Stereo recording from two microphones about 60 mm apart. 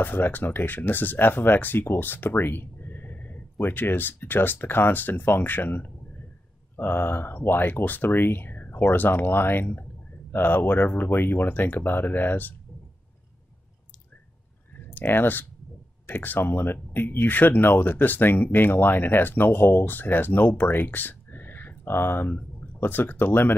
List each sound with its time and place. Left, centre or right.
0.0 s speech: left
15.0 s speech: left